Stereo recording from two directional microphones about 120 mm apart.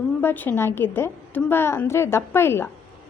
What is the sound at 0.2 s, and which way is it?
A woman's voice, 15° left (ahead or behind).